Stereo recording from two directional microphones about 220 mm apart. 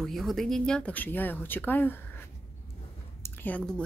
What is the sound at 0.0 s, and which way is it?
Speech, centre (ahead or behind).